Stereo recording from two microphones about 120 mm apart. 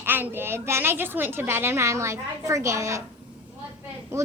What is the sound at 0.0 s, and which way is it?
A woman's voice, 15° right (ahead or behind).